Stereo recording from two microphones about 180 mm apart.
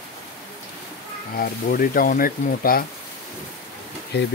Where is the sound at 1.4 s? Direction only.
50° left (ahead or behind).